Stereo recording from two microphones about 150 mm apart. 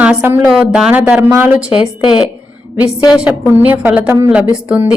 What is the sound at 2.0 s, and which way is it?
Speech, 35° left (ahead or behind).